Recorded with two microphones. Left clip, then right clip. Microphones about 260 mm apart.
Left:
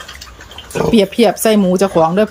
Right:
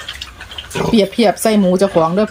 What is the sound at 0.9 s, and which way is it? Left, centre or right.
Speech, centre.